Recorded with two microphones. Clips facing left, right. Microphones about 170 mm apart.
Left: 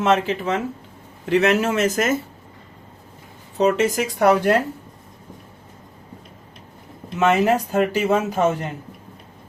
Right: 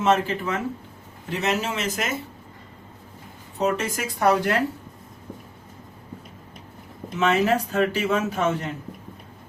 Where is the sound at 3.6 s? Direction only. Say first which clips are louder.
Left 6 dB; 75° left (ahead or behind).